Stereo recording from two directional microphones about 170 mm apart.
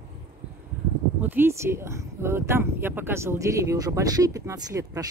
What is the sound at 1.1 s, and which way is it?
Speech, 10° right (ahead or behind).